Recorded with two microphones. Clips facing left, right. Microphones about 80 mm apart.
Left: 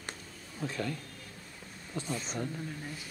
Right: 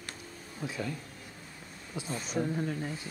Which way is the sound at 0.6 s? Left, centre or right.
Centre.